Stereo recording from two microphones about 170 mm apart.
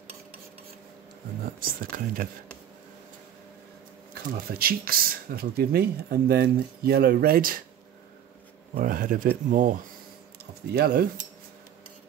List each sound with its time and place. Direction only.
1.4 s speech: 60° right (ahead or behind)
4.1 s speech: 60° right (ahead or behind)
8.7 s speech: 55° right (ahead or behind)
10.7 s speech: 65° right (ahead or behind)